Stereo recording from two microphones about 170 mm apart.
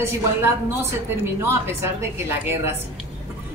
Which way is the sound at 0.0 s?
15° right (ahead or behind).